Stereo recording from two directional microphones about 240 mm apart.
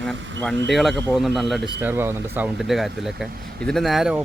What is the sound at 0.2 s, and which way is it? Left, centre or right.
Speech, right.